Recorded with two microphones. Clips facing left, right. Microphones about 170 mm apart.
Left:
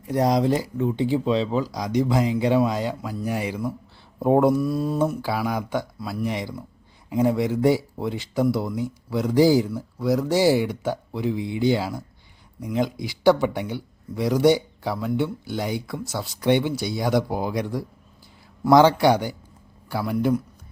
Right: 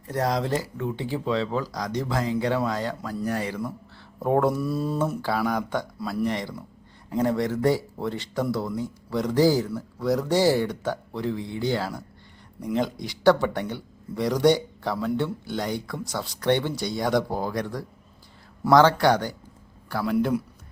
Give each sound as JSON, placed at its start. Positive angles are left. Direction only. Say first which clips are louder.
{"t": 0.0, "sound": "speech", "louder": "left 5 dB", "side_deg": 15}
{"t": 4.5, "sound": "speech", "louder": "left 3 dB", "side_deg": 0}